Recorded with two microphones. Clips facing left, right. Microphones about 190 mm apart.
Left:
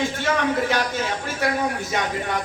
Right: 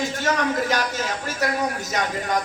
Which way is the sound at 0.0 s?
40° right (ahead or behind).